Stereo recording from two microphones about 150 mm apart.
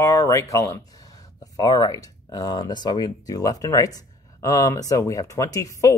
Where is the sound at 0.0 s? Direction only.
20° left (ahead or behind).